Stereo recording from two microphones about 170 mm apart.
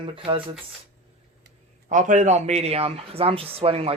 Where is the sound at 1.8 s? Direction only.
45° right (ahead or behind).